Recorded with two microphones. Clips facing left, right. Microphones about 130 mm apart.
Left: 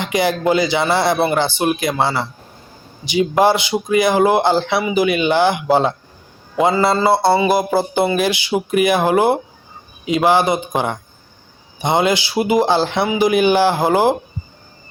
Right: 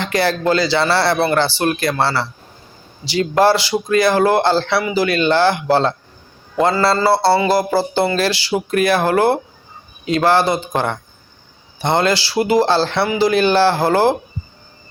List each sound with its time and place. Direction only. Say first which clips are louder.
0.0 s a man's voice: even; 15° left (ahead or behind)
6.6 s a sound: even; 15° left (ahead or behind)
7.8 s a man's voice: even; 20° left (ahead or behind)